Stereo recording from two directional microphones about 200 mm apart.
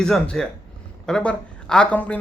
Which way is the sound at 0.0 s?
5° left (ahead or behind).